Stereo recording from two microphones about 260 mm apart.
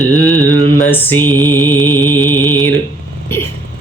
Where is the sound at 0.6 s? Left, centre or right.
Centre.